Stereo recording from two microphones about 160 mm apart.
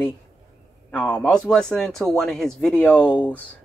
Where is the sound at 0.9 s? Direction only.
10° left (ahead or behind).